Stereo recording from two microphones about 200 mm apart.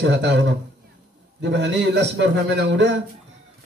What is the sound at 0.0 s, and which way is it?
Speech, 60° right (ahead or behind).